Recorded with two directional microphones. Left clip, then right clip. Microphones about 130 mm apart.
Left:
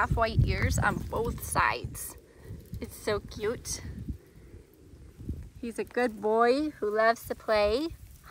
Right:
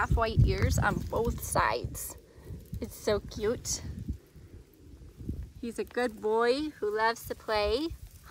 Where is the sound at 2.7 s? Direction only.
35° right (ahead or behind).